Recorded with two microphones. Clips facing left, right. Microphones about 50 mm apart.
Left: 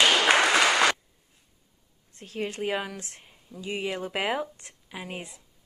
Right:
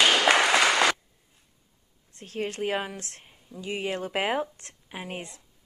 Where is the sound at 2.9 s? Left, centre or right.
Centre.